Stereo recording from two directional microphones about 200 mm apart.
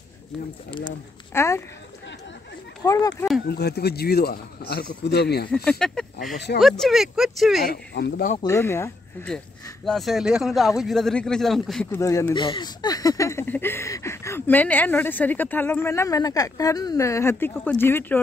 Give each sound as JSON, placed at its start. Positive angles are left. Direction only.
{"t": 0.7, "sound": "speech", "side_deg": 25}
{"t": 1.3, "sound": "speech", "side_deg": 15}
{"t": 2.8, "sound": "speech", "side_deg": 20}
{"t": 3.4, "sound": "speech", "side_deg": 55}
{"t": 5.7, "sound": "speech", "side_deg": 5}
{"t": 7.6, "sound": "speech", "side_deg": 55}
{"t": 8.4, "sound": "speech", "side_deg": 15}
{"t": 9.8, "sound": "speech", "side_deg": 0}